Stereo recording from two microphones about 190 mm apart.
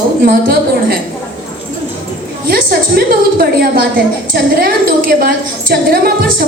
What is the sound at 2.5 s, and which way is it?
A man's voice, 50° right (ahead or behind).